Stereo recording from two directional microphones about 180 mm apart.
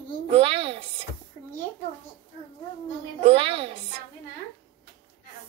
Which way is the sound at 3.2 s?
30° right (ahead or behind).